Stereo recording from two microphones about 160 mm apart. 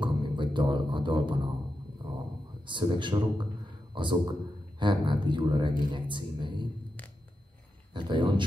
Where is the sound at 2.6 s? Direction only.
30° right (ahead or behind).